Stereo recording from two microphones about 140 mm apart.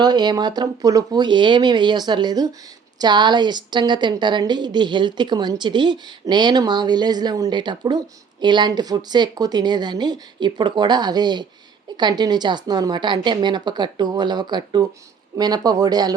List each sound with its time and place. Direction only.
0.0 s a woman's voice: 30° right (ahead or behind)